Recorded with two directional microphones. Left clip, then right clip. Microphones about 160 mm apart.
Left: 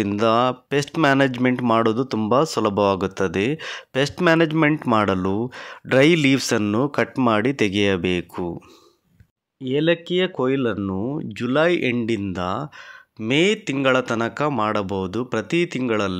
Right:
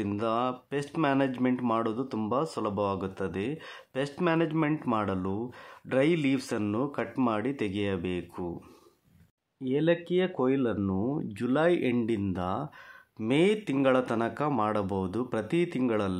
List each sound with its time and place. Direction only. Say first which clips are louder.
0.0 s speech: left 11 dB; 35° left (ahead or behind)
9.6 s speech: left 7 dB; 20° left (ahead or behind)